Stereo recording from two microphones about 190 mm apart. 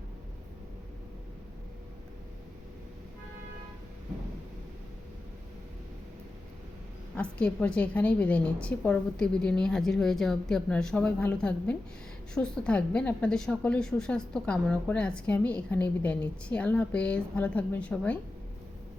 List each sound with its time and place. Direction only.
7.2 s a woman's voice: 5° left (ahead or behind)